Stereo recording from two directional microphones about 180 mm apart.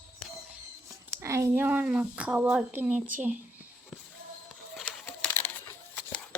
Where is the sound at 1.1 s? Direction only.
15° right (ahead or behind).